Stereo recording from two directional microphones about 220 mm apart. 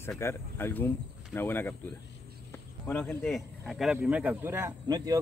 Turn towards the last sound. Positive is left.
turn(degrees=-15)  # may be behind; listen again after turning